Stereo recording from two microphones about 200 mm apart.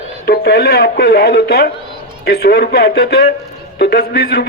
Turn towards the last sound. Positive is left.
turn(degrees=55)  # may be behind; listen again after turning